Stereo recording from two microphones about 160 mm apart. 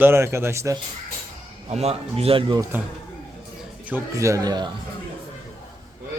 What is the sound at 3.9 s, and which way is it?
Speech, 15° right (ahead or behind).